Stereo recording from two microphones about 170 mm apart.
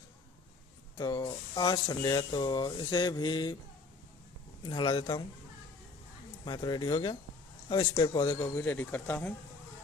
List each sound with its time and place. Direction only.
0.9 s speech: 20° left (ahead or behind)
4.6 s speech: 25° left (ahead or behind)
6.4 s speech: 25° left (ahead or behind)
8.5 s speech: 10° left (ahead or behind)